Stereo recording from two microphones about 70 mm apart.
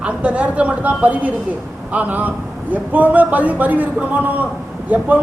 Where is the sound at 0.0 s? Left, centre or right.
Centre.